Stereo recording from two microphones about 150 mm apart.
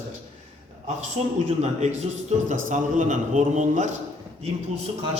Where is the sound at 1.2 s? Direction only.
45° right (ahead or behind).